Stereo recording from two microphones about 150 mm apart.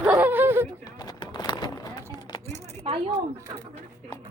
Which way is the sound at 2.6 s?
45° right (ahead or behind).